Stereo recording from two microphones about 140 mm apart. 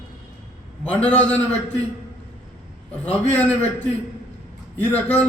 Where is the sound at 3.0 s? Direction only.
10° left (ahead or behind).